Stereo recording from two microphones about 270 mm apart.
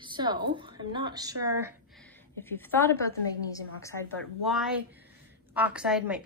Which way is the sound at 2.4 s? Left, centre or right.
Centre.